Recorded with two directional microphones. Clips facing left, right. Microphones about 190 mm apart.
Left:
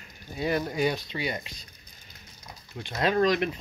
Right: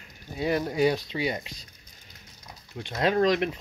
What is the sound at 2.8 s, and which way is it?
Speech, 20° right (ahead or behind).